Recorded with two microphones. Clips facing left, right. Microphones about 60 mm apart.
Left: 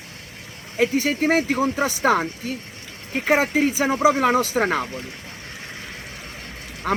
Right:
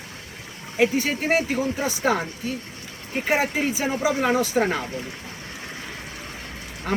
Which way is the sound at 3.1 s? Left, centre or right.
Left.